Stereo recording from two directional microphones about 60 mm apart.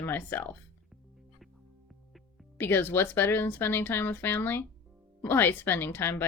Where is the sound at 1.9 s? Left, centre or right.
Centre.